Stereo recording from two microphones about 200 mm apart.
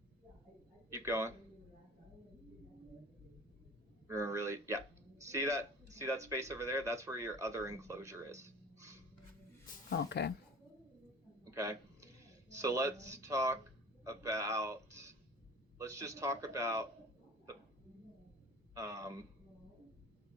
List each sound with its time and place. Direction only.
0.9 s a man's voice: 15° right (ahead or behind)
4.1 s speech: 15° right (ahead or behind)
9.9 s speech: 55° left (ahead or behind)
11.5 s a sound: 15° right (ahead or behind)
12.5 s a man's voice: 15° right (ahead or behind)
18.7 s speech: 15° right (ahead or behind)